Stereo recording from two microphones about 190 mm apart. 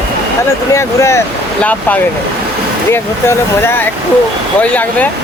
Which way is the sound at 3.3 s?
10° left (ahead or behind).